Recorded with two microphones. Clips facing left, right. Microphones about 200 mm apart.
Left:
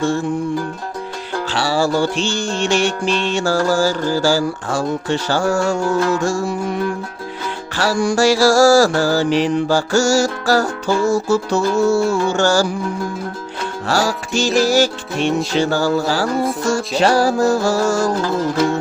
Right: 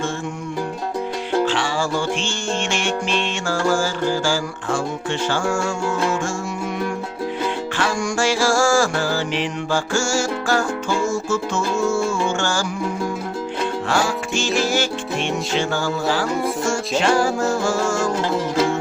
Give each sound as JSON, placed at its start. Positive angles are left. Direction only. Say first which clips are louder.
{"t": 1.5, "sound": "music", "louder": "left 4 dB", "side_deg": 35}
{"t": 7.8, "sound": "music", "louder": "left 7 dB", "side_deg": 35}
{"t": 13.8, "sound": "music", "louder": "left 6 dB", "side_deg": 40}